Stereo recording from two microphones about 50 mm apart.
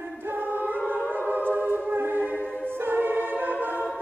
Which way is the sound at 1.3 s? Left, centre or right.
Right.